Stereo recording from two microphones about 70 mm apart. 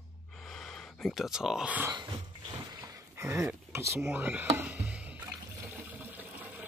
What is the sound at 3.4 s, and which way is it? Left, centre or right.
Speech, right.